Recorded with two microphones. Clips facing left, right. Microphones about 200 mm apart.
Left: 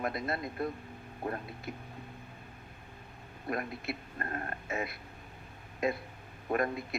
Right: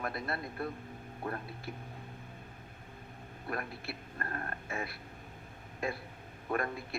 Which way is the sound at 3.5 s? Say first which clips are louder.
Left 4 dB; 20° left (ahead or behind).